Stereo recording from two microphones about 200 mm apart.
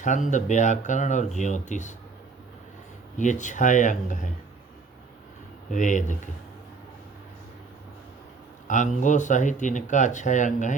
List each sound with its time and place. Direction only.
0.0 s speech: 40° left (ahead or behind)
3.2 s speech: 40° left (ahead or behind)
5.7 s speech: 40° left (ahead or behind)
8.6 s speech: 40° left (ahead or behind)